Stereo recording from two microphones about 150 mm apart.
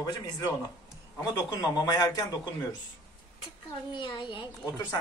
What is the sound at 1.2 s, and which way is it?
A child's voice, 25° left (ahead or behind).